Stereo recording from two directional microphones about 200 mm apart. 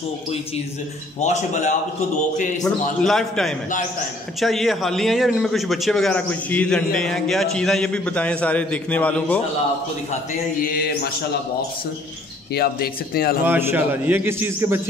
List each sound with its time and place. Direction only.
1.2 s a man's voice: 35° left (ahead or behind)
3.0 s a man's voice: centre (ahead or behind)
12.5 s speech: 50° left (ahead or behind)
13.5 s a man's voice: 10° right (ahead or behind)